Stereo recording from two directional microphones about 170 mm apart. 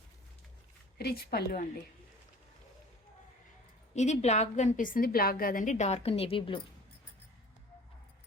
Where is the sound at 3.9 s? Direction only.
40° left (ahead or behind).